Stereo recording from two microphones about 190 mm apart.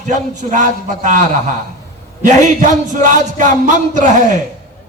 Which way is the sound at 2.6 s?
40° right (ahead or behind).